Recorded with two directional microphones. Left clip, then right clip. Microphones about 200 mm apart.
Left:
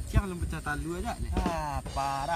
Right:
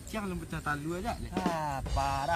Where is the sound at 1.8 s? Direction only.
Centre (ahead or behind).